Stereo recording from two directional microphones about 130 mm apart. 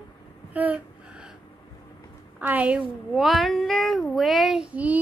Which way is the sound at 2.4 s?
10° right (ahead or behind).